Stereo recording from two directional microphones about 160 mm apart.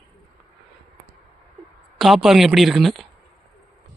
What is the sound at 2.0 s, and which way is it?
A woman's voice, centre (ahead or behind).